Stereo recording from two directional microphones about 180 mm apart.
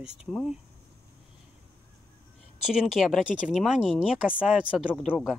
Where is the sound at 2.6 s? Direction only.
5° right (ahead or behind).